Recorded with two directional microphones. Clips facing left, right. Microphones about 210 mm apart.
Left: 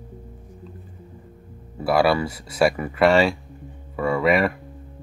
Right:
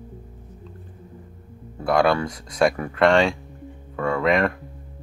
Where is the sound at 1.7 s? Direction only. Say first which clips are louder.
Even; 5° left (ahead or behind).